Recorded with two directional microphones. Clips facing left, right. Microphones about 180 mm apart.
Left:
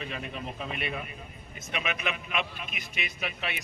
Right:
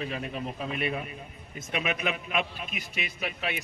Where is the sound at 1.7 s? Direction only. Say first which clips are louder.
Right 3 dB; 40° right (ahead or behind).